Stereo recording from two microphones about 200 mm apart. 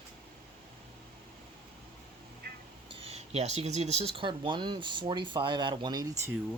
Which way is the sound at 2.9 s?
30° right (ahead or behind).